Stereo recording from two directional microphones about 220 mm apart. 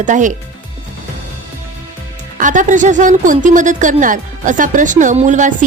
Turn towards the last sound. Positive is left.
turn(degrees=-35)  # may be behind; listen again after turning